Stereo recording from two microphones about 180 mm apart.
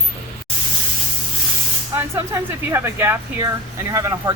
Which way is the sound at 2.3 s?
15° right (ahead or behind).